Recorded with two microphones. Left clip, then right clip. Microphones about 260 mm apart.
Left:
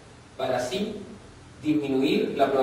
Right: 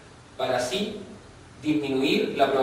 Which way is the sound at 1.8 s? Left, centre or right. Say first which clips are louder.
Right 1 dB; centre.